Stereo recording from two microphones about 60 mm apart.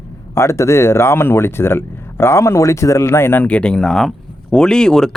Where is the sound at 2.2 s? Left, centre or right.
Left.